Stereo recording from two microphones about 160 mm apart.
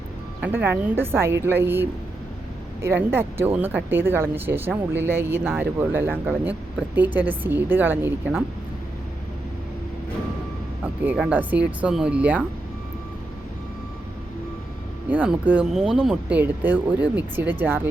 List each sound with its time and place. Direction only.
0.4 s speech: 10° right (ahead or behind)
11.0 s speech: 10° right (ahead or behind)
15.1 s speech: 10° right (ahead or behind)